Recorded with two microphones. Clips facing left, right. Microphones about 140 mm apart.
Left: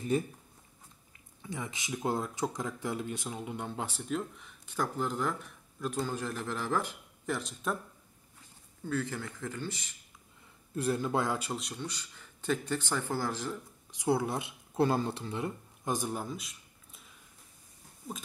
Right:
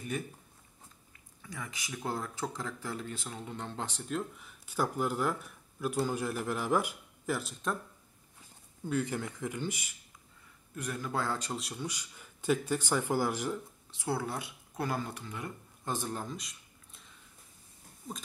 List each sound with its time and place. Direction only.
0.1 s speech: 30° left (ahead or behind)
1.4 s speech: 20° left (ahead or behind); by 7.7 s 5° right (ahead or behind)
8.8 s speech: 15° right (ahead or behind)
10.7 s speech: 30° left (ahead or behind)
11.3 s speech: 5° left (ahead or behind); by 13.6 s 15° right (ahead or behind)
13.9 s speech: 20° left (ahead or behind)
15.8 s a sound: 15° left (ahead or behind)
18.1 s speech: 5° left (ahead or behind)